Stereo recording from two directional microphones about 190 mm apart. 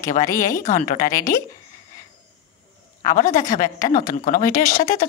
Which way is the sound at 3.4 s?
40° left (ahead or behind).